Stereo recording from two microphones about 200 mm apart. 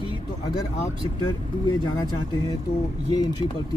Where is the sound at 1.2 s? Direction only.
20° left (ahead or behind).